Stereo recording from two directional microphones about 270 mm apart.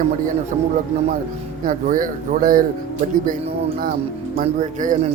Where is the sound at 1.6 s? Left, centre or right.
Right.